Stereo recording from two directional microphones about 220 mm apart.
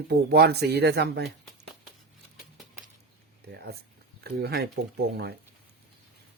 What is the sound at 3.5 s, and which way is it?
Speech, 45° right (ahead or behind).